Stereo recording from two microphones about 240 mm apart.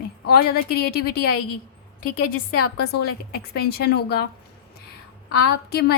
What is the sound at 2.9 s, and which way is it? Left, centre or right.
A woman's voice, left.